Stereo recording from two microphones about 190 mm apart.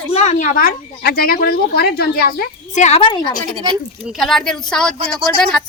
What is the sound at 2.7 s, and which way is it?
Speech, 40° left (ahead or behind).